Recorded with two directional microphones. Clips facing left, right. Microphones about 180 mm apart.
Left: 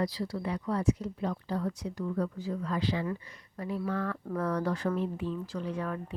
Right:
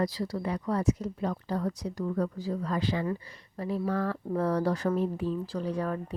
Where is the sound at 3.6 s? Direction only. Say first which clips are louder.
Right 3 dB; 35° right (ahead or behind).